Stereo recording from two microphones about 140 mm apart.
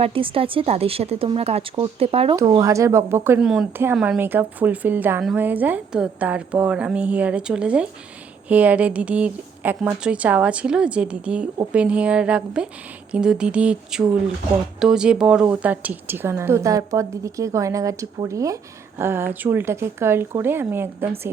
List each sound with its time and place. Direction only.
0.0 s a woman's voice: 40° right (ahead or behind)
2.6 s speech: 25° right (ahead or behind)
3.4 s speech: 5° right (ahead or behind)
4.2 s a woman's voice: 15° right (ahead or behind)